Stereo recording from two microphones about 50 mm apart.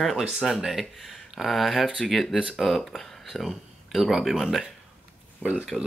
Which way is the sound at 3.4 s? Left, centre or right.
Centre.